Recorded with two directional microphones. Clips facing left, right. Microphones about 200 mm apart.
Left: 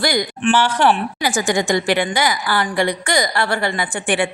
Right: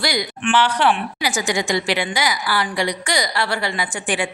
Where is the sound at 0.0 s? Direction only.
50° left (ahead or behind).